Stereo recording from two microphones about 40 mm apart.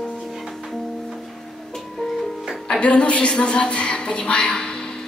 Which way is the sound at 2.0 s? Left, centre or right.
Centre.